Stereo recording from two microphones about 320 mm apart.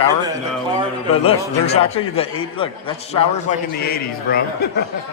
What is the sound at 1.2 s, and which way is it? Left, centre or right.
A man's voice, centre.